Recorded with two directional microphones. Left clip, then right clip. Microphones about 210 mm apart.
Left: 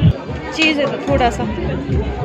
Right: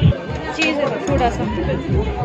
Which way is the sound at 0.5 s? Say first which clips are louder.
Left 3 dB; 20° left (ahead or behind).